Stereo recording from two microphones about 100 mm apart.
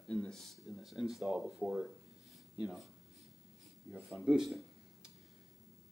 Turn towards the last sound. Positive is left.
turn(degrees=-5)  # may be behind; listen again after turning